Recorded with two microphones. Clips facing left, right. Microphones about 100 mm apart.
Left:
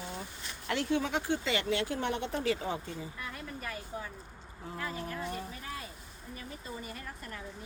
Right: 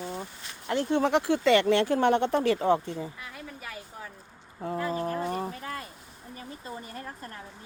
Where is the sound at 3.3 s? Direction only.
5° right (ahead or behind).